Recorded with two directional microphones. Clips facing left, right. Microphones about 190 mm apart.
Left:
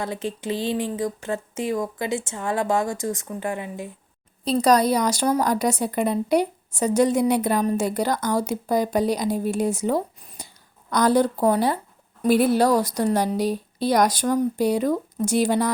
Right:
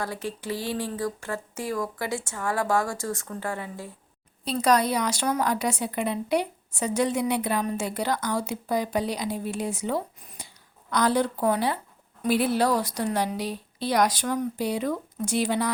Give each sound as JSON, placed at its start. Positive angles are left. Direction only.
{"t": 0.0, "sound": "speech", "side_deg": 20}
{"t": 4.4, "sound": "a woman's voice", "side_deg": 40}